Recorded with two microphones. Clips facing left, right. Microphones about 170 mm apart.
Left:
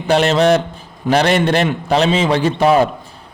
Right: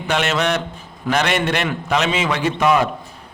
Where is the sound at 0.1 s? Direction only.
35° left (ahead or behind).